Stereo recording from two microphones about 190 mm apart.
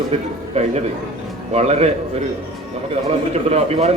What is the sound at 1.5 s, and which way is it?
Speech, 35° right (ahead or behind).